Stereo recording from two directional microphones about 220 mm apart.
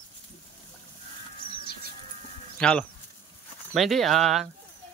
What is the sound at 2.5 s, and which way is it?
Speech, 5° left (ahead or behind).